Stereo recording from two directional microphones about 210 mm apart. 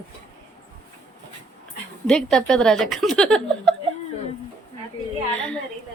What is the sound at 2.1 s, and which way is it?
A woman's voice, 5° left (ahead or behind).